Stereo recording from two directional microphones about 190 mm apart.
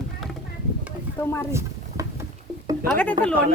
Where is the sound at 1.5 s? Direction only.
15° right (ahead or behind).